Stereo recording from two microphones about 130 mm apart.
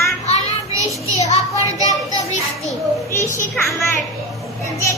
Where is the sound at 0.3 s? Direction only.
25° right (ahead or behind).